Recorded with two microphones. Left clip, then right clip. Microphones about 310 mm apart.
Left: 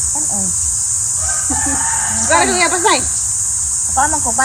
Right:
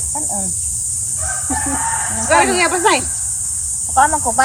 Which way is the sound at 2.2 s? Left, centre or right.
Centre.